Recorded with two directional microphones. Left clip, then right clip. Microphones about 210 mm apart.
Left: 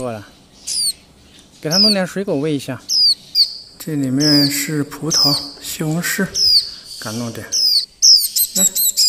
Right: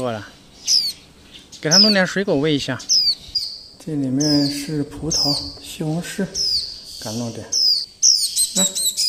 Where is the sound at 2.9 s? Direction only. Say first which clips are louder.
Left 4 dB; 20° left (ahead or behind).